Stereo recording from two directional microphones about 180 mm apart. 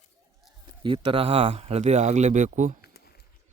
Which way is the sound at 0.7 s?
30° right (ahead or behind).